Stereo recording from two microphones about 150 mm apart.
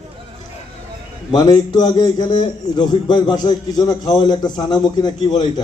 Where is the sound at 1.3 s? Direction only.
25° left (ahead or behind).